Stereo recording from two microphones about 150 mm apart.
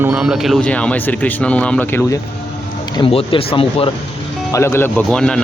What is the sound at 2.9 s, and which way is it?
Speech, 35° left (ahead or behind).